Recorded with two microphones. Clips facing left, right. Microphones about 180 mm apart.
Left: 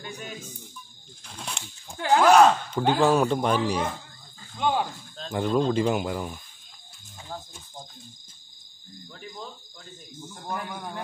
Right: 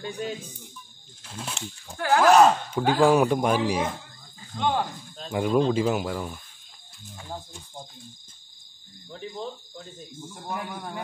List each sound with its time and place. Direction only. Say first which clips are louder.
0.0 s speech: right 6 dB; 30° right (ahead or behind)
1.2 s speech: right 3 dB; 5° right (ahead or behind)
2.0 s speech: left 1 dB; 15° left (ahead or behind)
2.2 s speech: even; centre (ahead or behind)
4.6 s speech: even; 10° left (ahead or behind)
5.1 s speech: right 2 dB; 10° right (ahead or behind)
9.1 s speech: right 6 dB; 25° right (ahead or behind)
10.3 s speech: even; 5° right (ahead or behind)